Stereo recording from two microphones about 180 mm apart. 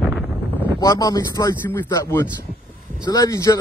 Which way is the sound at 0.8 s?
20° left (ahead or behind).